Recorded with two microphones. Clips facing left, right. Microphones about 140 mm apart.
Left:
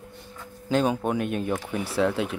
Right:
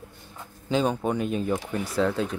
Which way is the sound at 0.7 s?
Centre (ahead or behind).